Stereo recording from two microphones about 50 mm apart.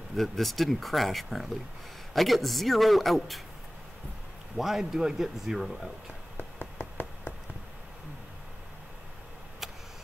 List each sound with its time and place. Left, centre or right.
0.1 s speech: centre
4.6 s speech: centre
6.3 s a sound: left